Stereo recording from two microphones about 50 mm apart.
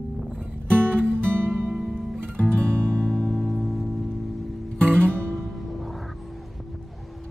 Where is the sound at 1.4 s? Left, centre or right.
Right.